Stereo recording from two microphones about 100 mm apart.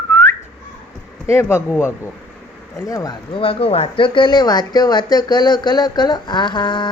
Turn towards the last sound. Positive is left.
turn(degrees=50)  # may be behind; listen again after turning